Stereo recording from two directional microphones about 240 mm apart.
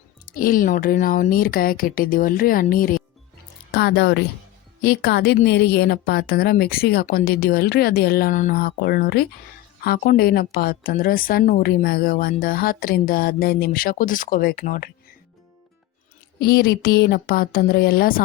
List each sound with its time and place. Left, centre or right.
0.3 s a woman's voice: left
16.4 s a woman's voice: left